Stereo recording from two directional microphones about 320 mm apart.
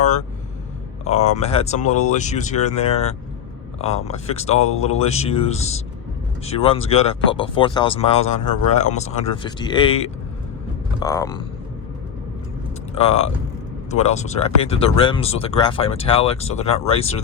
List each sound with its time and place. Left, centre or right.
1.4 s speech: centre
12.9 s speech: centre